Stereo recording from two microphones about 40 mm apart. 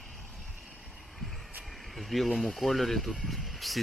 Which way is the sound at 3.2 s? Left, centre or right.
Centre.